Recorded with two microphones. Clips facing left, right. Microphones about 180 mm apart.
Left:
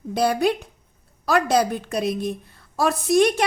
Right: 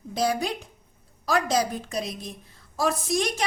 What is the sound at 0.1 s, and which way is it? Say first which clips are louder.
A woman's voice: left 6 dB; 60° left (ahead or behind).